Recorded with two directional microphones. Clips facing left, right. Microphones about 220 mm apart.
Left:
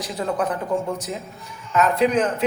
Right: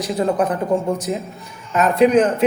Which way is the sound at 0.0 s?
15° right (ahead or behind).